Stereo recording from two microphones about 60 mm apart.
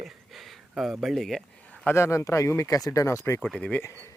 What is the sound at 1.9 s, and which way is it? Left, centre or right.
Speech, left.